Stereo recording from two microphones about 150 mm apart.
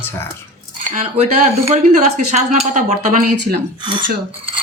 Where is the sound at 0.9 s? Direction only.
50° right (ahead or behind).